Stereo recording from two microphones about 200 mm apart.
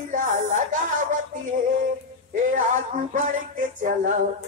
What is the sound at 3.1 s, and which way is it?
Speech, 40° right (ahead or behind).